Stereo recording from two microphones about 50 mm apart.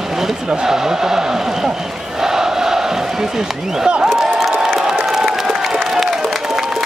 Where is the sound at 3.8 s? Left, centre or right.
Centre.